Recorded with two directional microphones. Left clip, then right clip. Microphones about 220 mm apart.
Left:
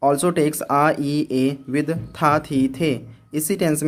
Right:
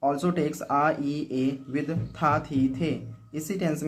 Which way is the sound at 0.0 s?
50° left (ahead or behind).